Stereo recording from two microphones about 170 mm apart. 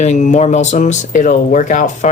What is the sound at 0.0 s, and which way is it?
Speech, 45° left (ahead or behind).